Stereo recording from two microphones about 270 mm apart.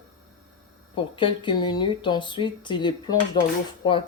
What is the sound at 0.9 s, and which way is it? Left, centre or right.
Speech, centre.